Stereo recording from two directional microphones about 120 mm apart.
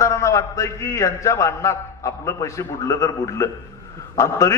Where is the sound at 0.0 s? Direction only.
25° left (ahead or behind).